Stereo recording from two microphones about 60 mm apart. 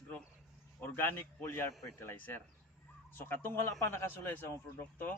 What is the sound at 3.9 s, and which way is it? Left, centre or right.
Speech, left.